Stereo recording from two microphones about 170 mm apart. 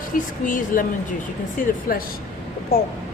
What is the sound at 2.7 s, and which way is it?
Speech, 65° left (ahead or behind).